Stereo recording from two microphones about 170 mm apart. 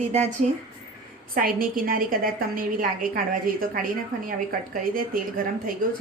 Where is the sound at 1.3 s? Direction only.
55° right (ahead or behind).